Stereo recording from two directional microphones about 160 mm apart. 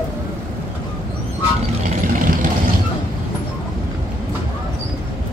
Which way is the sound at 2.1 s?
55° right (ahead or behind).